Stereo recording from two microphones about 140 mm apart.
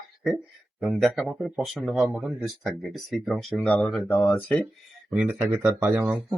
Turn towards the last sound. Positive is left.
turn(degrees=-10)  # may be behind; listen again after turning